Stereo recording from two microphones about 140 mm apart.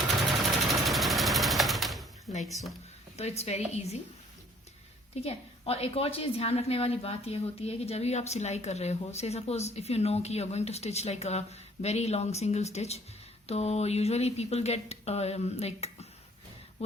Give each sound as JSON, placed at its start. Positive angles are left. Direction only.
{"t": 0.2, "sound": "sewing machine", "side_deg": 0}
{"t": 2.3, "sound": "a sound", "side_deg": 90}
{"t": 3.2, "sound": "a woman's voice", "side_deg": 50}
{"t": 5.1, "sound": "a woman's voice", "side_deg": 45}